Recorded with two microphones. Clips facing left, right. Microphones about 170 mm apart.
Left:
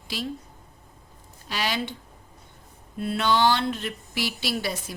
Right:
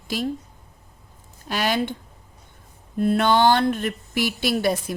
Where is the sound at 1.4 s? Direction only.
50° right (ahead or behind).